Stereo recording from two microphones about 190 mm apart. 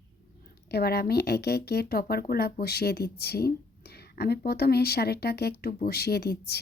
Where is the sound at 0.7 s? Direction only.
55° left (ahead or behind).